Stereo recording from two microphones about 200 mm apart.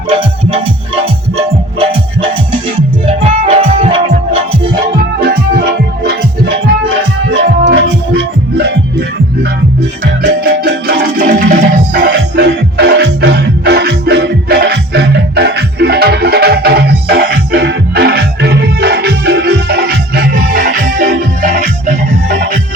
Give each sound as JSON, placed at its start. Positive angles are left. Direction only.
{"t": 0.1, "sound": "music", "side_deg": -25}
{"t": 7.3, "sound": "music", "side_deg": -60}
{"t": 10.2, "sound": "music", "side_deg": -55}